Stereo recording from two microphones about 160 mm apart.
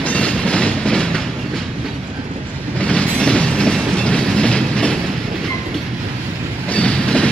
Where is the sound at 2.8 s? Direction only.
5° left (ahead or behind).